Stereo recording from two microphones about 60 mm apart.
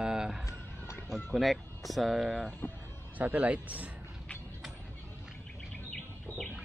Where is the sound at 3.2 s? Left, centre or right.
Right.